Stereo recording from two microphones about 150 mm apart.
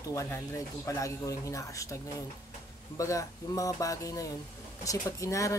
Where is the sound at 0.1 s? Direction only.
20° left (ahead or behind).